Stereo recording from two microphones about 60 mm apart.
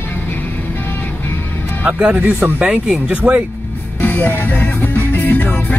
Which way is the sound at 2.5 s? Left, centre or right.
Centre.